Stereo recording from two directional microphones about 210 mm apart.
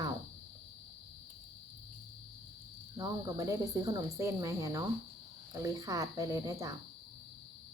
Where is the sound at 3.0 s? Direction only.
15° right (ahead or behind).